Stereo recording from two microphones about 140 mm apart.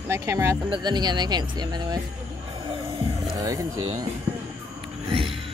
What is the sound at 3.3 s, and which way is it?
Speech, 25° right (ahead or behind).